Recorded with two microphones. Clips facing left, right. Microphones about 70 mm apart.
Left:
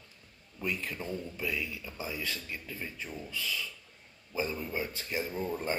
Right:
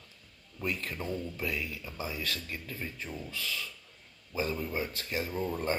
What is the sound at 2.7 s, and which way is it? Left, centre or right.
Speech, centre.